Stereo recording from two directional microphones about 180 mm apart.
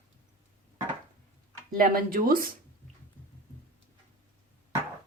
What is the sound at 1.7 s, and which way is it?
Speech, 50° right (ahead or behind).